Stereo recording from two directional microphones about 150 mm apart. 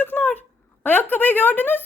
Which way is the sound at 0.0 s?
10° left (ahead or behind).